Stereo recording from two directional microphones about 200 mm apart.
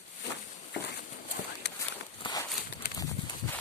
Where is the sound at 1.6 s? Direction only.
60° left (ahead or behind).